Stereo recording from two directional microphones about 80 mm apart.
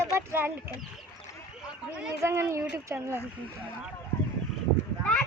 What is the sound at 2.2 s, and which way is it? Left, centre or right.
Speech, right.